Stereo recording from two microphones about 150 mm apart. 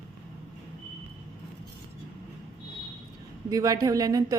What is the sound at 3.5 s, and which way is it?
Speech, 25° right (ahead or behind).